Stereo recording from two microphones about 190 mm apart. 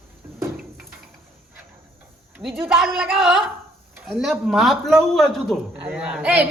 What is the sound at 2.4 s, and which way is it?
Speech, centre (ahead or behind).